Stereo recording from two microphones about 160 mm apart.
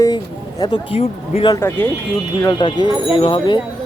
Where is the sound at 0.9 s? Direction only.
35° left (ahead or behind).